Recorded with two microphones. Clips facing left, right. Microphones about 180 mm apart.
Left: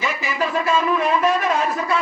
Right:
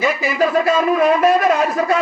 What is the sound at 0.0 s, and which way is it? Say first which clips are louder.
A man's voice: right 7 dB; 40° right (ahead or behind).